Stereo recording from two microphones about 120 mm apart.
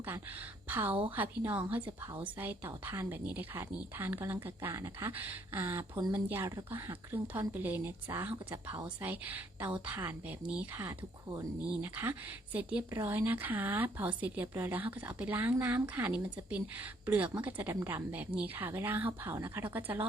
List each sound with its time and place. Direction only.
0.7 s speech: 15° right (ahead or behind)